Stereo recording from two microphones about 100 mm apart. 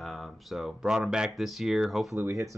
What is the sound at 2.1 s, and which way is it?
Speech, 30° right (ahead or behind).